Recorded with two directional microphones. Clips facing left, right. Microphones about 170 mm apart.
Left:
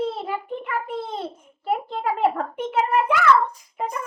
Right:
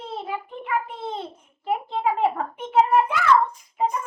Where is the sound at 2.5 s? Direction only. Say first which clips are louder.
Right 3 dB; 70° left (ahead or behind).